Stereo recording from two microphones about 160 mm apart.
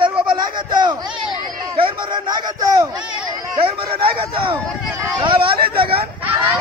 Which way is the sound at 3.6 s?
35° right (ahead or behind).